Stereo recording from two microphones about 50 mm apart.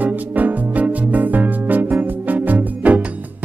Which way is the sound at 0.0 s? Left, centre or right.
Right.